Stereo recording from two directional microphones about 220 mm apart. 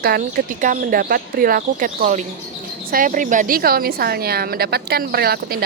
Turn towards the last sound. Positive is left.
turn(degrees=-45)  # may be behind; listen again after turning